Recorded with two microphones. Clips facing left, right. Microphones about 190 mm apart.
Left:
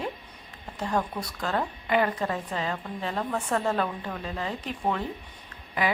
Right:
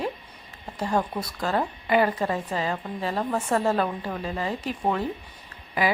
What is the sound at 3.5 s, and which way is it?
A woman's voice, 10° right (ahead or behind).